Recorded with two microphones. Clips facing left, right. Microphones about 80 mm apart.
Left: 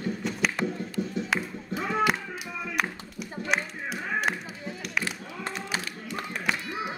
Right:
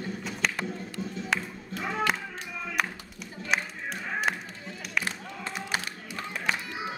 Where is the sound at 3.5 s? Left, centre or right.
Centre.